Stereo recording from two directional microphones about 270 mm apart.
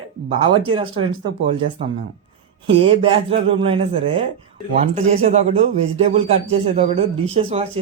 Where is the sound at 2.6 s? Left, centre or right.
Centre.